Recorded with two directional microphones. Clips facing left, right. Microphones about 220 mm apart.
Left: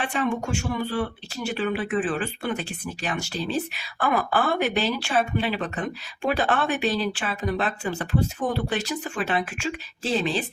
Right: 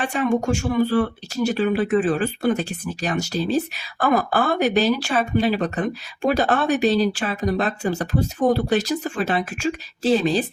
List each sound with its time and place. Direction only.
0.0 s speech: 40° right (ahead or behind)